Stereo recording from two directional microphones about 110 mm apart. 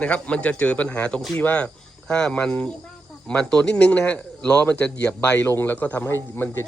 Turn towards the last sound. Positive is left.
turn(degrees=20)  # may be behind; listen again after turning